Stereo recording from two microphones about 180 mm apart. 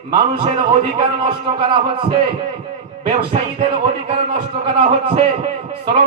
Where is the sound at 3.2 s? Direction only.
30° right (ahead or behind).